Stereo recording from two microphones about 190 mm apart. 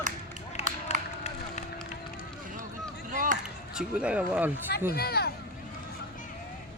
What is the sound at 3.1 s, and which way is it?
Chop, 45° right (ahead or behind).